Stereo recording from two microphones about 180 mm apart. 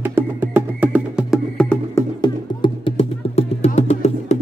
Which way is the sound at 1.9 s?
25° left (ahead or behind).